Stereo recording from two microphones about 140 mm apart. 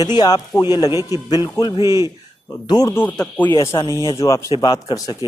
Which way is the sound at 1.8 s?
20° right (ahead or behind).